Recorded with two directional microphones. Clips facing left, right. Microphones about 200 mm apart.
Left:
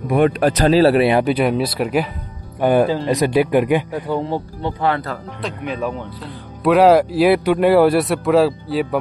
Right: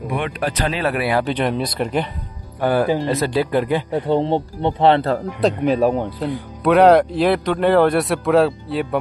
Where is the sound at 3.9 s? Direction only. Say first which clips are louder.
Right 4 dB; 25° right (ahead or behind).